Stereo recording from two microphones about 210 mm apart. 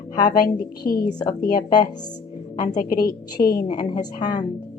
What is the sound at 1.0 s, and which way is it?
Speech, 20° left (ahead or behind).